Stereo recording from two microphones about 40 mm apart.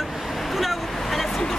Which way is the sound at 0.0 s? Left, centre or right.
Centre.